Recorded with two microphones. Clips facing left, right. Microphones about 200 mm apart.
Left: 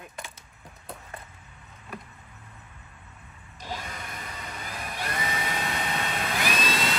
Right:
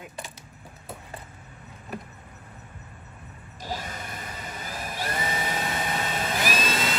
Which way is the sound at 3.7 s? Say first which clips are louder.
Right 2 dB; 30° right (ahead or behind).